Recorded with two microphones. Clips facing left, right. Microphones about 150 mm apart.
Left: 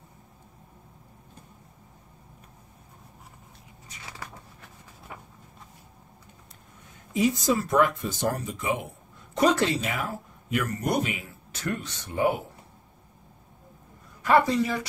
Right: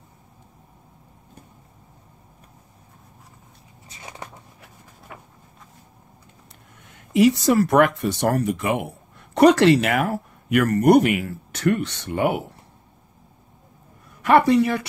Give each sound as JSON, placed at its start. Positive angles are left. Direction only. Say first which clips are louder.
{"t": 3.9, "sound": "a sound", "louder": "right 4 dB", "side_deg": -25}
{"t": 6.9, "sound": "speech", "louder": "right 8 dB", "side_deg": -80}
{"t": 14.2, "sound": "speech", "louder": "right 6 dB", "side_deg": -65}